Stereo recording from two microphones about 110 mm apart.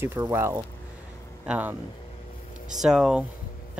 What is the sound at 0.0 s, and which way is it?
Speech, 25° right (ahead or behind).